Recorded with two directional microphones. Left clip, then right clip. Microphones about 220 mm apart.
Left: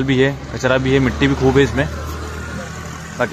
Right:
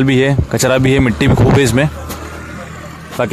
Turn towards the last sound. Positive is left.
turn(degrees=-45)  # may be behind; listen again after turning